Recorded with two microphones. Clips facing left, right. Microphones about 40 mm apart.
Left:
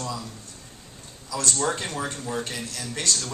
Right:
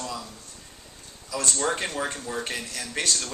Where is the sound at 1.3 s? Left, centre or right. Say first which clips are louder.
Left 1 dB; right.